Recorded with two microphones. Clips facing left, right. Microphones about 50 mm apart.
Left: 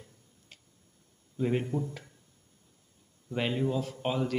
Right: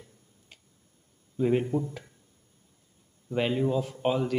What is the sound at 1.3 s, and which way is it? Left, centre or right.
Speech, centre.